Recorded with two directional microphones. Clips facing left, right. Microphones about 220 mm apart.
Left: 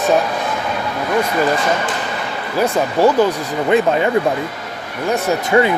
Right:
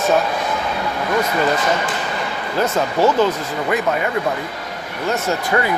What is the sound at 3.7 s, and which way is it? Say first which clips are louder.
Speech: left 6 dB; 30° left (ahead or behind).